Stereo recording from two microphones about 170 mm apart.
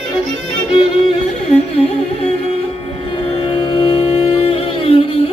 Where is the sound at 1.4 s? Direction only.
35° left (ahead or behind).